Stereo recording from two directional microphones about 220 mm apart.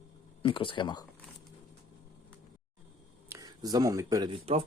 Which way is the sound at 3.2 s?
15° right (ahead or behind).